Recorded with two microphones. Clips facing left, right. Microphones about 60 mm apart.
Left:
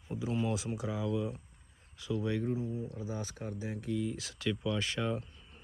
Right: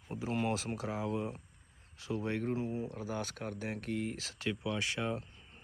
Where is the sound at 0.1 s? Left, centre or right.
Right.